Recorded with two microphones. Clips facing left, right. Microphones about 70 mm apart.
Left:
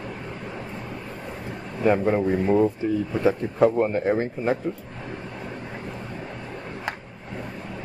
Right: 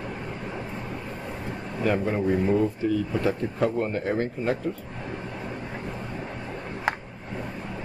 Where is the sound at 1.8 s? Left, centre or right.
Left.